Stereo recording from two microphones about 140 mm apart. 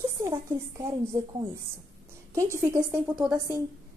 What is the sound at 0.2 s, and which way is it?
Speech, 20° right (ahead or behind).